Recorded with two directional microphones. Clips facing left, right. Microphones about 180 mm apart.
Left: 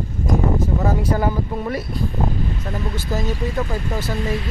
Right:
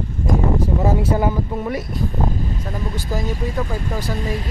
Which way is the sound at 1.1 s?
15° right (ahead or behind).